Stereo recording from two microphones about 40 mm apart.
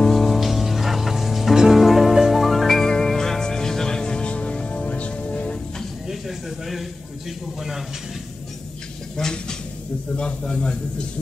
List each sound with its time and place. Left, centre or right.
0.0 s music: centre; by 5.6 s left
6.0 s a man's voice: centre
9.1 s a man's voice: centre